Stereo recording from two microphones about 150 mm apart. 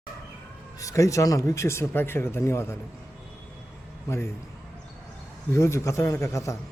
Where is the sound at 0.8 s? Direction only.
20° left (ahead or behind).